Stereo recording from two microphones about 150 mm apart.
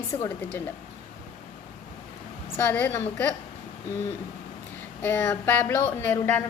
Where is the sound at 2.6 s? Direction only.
10° left (ahead or behind).